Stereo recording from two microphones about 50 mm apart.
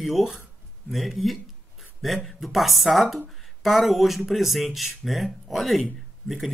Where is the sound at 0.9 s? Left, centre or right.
Centre.